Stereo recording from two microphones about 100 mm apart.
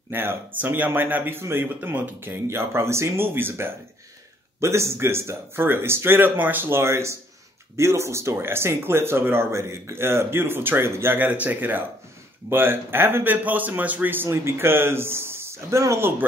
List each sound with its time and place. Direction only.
0.1 s speech: 20° right (ahead or behind)